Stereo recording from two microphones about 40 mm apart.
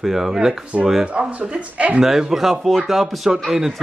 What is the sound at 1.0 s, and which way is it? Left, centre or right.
Speech, right.